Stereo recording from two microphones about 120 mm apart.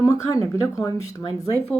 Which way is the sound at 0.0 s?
30° left (ahead or behind).